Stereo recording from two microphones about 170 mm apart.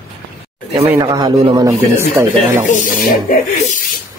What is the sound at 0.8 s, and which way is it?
Speech, 25° right (ahead or behind).